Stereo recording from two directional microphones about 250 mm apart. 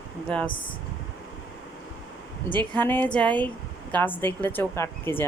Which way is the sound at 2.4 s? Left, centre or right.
Centre.